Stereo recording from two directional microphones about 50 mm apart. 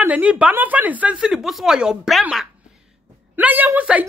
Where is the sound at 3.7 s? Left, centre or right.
Right.